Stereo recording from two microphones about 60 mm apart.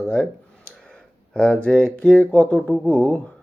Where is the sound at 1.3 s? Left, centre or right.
Centre.